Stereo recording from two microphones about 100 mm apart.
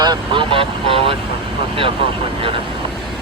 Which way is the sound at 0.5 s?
65° right (ahead or behind).